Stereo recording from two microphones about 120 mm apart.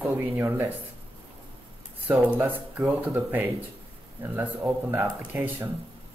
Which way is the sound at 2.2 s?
15° right (ahead or behind).